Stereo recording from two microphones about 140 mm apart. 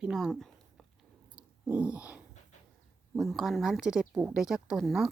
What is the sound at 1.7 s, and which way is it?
Speech, 10° right (ahead or behind).